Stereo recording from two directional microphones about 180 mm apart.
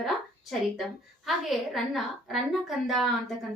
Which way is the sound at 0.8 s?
Centre (ahead or behind).